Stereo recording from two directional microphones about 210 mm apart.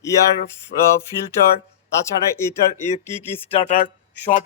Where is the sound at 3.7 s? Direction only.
40° left (ahead or behind).